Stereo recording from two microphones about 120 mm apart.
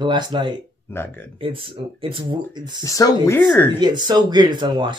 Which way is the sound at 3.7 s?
40° right (ahead or behind).